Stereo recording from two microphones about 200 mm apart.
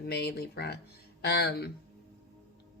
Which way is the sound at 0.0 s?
55° left (ahead or behind).